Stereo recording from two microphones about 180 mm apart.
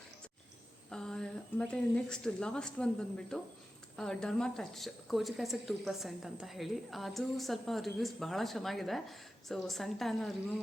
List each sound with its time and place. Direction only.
0.9 s a woman's voice: 5° left (ahead or behind)